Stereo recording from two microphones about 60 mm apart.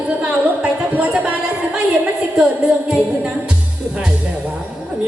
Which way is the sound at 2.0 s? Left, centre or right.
Centre.